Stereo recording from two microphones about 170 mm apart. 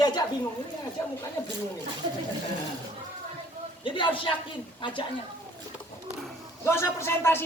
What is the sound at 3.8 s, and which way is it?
A woman's voice, 30° left (ahead or behind).